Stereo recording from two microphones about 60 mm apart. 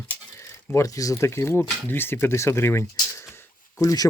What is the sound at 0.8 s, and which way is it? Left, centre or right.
Speech, left.